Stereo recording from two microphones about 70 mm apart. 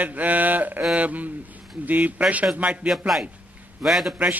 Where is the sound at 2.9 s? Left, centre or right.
Centre.